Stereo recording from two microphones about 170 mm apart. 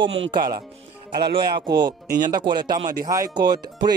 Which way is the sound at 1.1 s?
70° right (ahead or behind).